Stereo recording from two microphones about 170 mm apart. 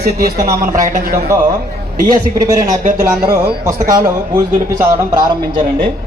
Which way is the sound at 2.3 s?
20° right (ahead or behind).